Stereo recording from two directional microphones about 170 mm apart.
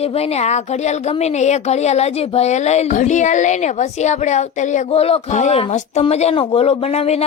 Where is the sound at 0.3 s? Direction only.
40° left (ahead or behind).